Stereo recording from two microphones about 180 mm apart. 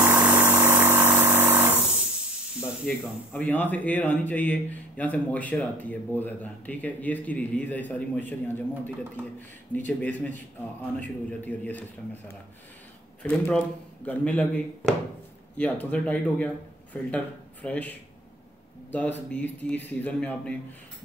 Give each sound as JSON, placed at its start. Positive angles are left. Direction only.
{"t": 0.0, "sound": "engine", "side_deg": -10}
{"t": 3.0, "sound": "a man's voice", "side_deg": 5}
{"t": 13.2, "sound": "a man's voice", "side_deg": 5}